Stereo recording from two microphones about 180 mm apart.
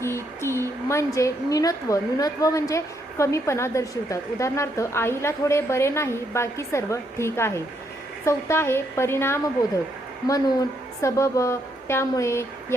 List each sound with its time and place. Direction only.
0.0 s a woman's voice: 15° left (ahead or behind)